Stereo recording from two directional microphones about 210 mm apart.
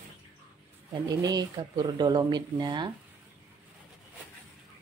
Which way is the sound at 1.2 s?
20° right (ahead or behind).